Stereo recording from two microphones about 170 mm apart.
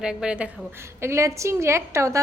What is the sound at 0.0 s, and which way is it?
A woman's voice, 5° right (ahead or behind).